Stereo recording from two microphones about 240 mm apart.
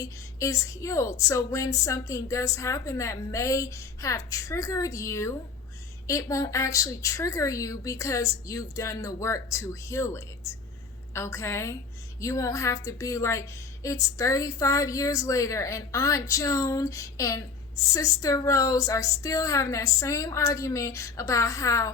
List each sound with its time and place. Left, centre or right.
0.0 s a woman's voice: centre